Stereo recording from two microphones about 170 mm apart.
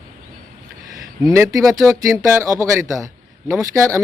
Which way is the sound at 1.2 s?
20° right (ahead or behind).